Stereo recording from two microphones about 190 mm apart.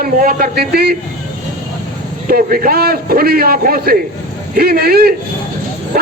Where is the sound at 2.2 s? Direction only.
50° right (ahead or behind).